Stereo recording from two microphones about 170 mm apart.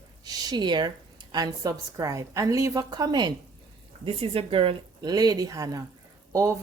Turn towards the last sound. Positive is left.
turn(degrees=-20)  # may be behind; listen again after turning